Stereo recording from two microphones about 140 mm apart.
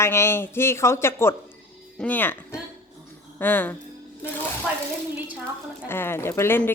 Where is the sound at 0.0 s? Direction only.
20° left (ahead or behind).